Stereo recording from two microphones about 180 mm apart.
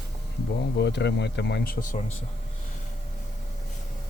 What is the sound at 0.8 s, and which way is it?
Speech, 70° left (ahead or behind).